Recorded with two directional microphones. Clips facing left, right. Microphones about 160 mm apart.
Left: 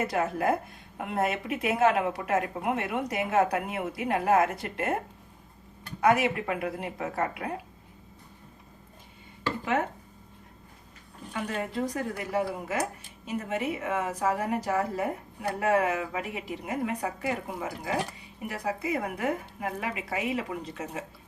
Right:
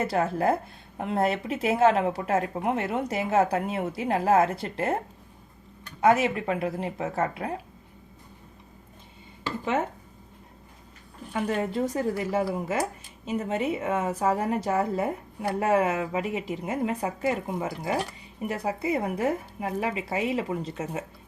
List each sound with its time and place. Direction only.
0.0 s a woman's voice: 30° right (ahead or behind)
6.0 s a woman's voice: 25° right (ahead or behind)
11.7 s a woman's voice: 25° right (ahead or behind)